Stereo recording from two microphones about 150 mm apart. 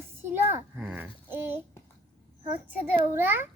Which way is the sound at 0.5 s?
10° right (ahead or behind).